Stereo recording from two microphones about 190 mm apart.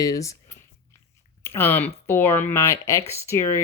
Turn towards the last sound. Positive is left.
turn(degrees=15)  # may be behind; listen again after turning